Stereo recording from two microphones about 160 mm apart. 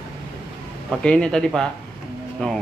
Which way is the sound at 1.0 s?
5° left (ahead or behind).